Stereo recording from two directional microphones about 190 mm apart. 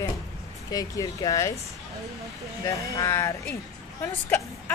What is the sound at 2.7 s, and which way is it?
A woman's voice, 15° left (ahead or behind).